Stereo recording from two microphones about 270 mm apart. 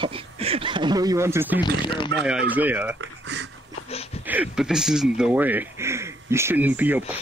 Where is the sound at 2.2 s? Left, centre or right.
Centre.